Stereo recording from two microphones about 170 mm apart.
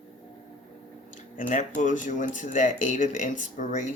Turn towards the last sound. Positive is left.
turn(degrees=45)  # may be behind; listen again after turning